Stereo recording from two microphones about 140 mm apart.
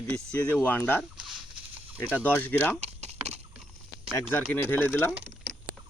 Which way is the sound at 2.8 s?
50° right (ahead or behind).